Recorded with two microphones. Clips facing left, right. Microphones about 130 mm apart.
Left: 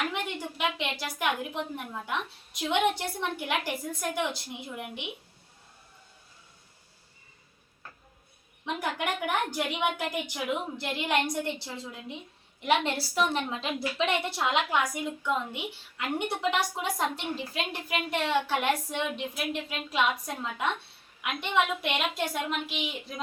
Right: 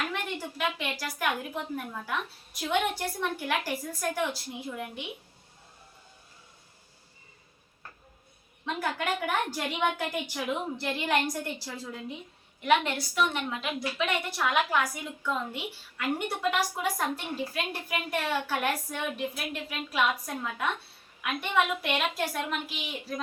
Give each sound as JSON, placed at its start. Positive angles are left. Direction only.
{"t": 0.1, "sound": "a woman's voice", "side_deg": 20}
{"t": 8.6, "sound": "a woman's voice", "side_deg": 15}
{"t": 11.4, "sound": "a woman's voice", "side_deg": 25}